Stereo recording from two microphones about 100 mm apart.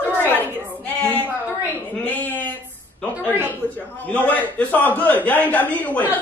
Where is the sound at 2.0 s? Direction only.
15° left (ahead or behind).